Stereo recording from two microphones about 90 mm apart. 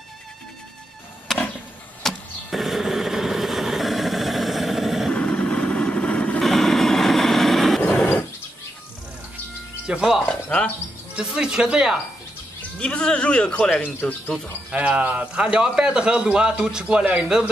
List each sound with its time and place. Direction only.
2.0 s a sound: centre (ahead or behind)
5.1 s vehicle: 15° left (ahead or behind)
6.4 s vehicle: 5° left (ahead or behind)
7.8 s a sound: 15° left (ahead or behind)
9.8 s a man's voice: 5° right (ahead or behind)
12.7 s speech: 10° left (ahead or behind)
14.7 s a man's voice: 15° right (ahead or behind)